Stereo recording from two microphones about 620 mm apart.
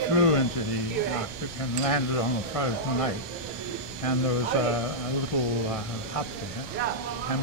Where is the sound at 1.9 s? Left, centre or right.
Left.